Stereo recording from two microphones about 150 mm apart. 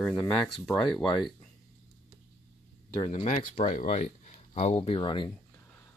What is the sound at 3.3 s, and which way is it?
Speech, 60° left (ahead or behind).